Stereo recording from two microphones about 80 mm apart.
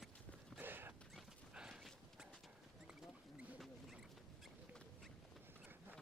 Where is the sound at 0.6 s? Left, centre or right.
Right.